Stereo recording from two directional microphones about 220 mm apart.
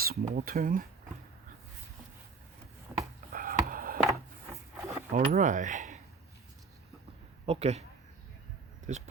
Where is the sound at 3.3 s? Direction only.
40° right (ahead or behind).